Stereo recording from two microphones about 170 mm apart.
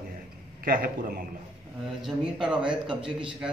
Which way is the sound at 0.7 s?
60° right (ahead or behind).